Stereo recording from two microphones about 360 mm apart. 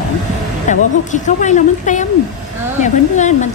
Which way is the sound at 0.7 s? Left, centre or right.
Centre.